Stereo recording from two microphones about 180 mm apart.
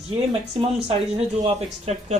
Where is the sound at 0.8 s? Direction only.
35° right (ahead or behind).